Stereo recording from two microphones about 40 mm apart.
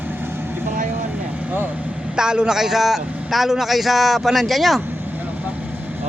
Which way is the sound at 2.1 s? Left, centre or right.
Right.